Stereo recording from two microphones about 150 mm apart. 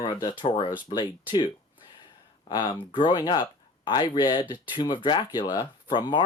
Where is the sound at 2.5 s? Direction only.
25° left (ahead or behind).